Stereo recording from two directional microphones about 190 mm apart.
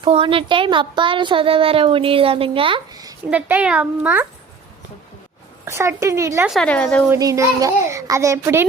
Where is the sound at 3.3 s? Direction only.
5° right (ahead or behind).